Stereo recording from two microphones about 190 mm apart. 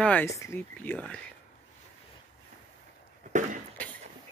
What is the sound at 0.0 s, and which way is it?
Speech, 5° left (ahead or behind).